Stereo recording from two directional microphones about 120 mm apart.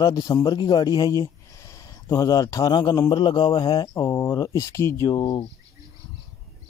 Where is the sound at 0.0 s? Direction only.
30° left (ahead or behind).